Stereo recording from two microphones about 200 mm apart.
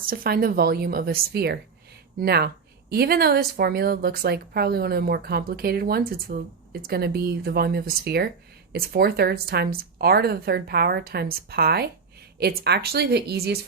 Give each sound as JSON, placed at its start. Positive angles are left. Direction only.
{"t": 0.1, "sound": "a woman's voice", "side_deg": -45}